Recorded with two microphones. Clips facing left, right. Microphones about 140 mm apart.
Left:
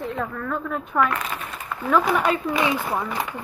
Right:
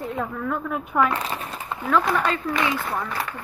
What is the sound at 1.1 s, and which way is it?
Crumpling, 30° right (ahead or behind).